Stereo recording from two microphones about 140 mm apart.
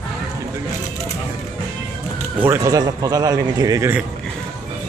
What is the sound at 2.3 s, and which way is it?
Speech, 15° right (ahead or behind).